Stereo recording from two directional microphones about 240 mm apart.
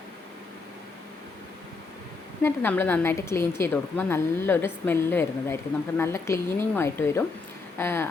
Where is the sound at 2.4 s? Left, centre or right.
Centre.